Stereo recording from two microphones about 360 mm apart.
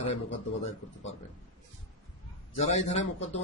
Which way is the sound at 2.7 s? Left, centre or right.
Centre.